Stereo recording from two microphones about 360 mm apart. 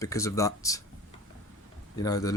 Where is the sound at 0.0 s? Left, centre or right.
Centre.